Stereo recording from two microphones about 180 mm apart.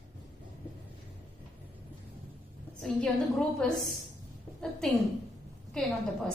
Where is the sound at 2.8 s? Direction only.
5° left (ahead or behind).